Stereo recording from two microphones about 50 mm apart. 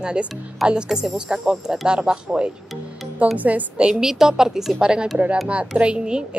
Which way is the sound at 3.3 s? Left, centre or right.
Right.